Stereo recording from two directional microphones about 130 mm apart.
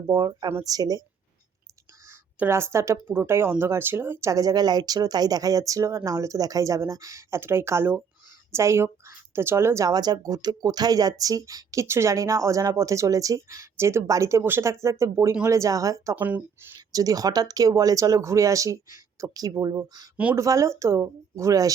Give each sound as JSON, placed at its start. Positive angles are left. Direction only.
{"t": 0.1, "sound": "speech", "side_deg": -30}
{"t": 2.0, "sound": "speech", "side_deg": -20}
{"t": 16.1, "sound": "speech", "side_deg": -15}
{"t": 16.7, "sound": "speech", "side_deg": -30}